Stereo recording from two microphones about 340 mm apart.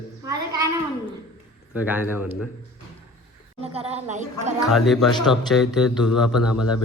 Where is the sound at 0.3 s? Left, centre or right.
Centre.